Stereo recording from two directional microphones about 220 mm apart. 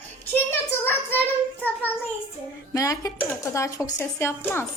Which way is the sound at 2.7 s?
15° left (ahead or behind).